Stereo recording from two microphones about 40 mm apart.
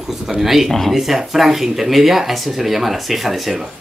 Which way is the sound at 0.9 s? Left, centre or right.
Centre.